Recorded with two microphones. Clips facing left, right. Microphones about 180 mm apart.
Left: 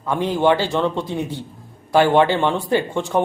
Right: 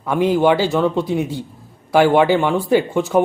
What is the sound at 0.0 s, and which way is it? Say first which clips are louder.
Speech: right 3 dB; 10° right (ahead or behind).